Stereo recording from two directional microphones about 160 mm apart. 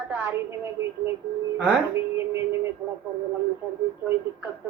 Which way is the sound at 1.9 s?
15° right (ahead or behind).